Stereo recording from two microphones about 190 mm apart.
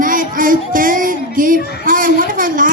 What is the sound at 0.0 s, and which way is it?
Music, 45° right (ahead or behind).